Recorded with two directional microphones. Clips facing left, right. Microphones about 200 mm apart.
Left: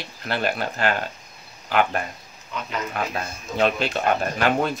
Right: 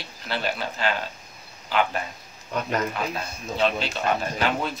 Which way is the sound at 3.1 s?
50° left (ahead or behind).